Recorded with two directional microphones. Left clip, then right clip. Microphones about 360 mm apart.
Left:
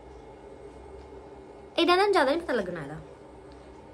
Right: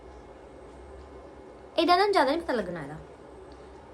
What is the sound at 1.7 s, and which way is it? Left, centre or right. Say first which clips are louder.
A woman's voice: even; centre.